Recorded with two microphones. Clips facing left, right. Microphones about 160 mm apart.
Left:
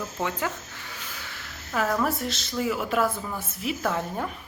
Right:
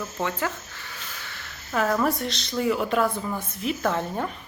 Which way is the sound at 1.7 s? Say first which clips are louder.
Right 2 dB; centre (ahead or behind).